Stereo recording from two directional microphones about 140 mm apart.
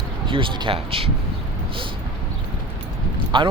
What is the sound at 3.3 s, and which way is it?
Speech, 35° right (ahead or behind).